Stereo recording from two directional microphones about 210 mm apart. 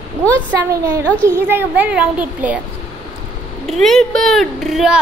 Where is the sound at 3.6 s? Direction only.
Centre (ahead or behind).